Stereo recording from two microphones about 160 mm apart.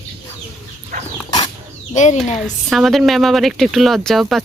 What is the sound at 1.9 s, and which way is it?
Speech, 50° left (ahead or behind).